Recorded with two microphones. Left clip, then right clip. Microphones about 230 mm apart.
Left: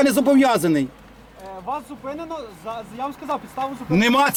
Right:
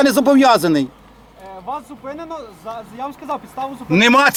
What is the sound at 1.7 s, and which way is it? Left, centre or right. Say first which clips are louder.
A man's voice: right 1 dB; centre.